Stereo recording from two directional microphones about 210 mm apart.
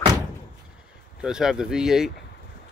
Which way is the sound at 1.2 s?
5° right (ahead or behind).